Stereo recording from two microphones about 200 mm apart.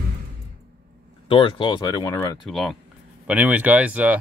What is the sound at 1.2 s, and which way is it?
Speech, 25° left (ahead or behind).